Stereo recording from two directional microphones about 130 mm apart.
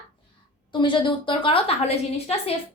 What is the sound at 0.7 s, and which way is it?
A woman's voice, 40° left (ahead or behind).